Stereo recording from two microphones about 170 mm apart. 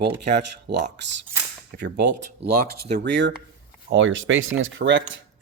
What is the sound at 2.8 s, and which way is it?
Speech, 80° right.